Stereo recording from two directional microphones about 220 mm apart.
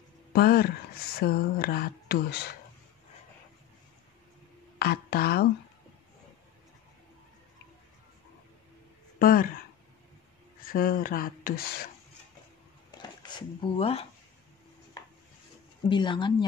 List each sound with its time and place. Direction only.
0.3 s speech: 45° left (ahead or behind)
4.7 s speech: 45° left (ahead or behind)
9.2 s speech: 40° left (ahead or behind)
10.6 s speech: 40° left (ahead or behind)
12.9 s dishes: 20° left (ahead or behind)
15.9 s speech: 20° left (ahead or behind)